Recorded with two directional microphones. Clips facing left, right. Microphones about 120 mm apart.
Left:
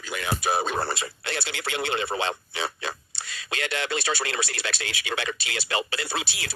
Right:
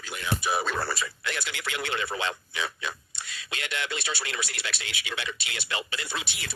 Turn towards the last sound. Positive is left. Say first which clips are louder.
# left 4 dB
turn(degrees=35)  # may be behind; listen again after turning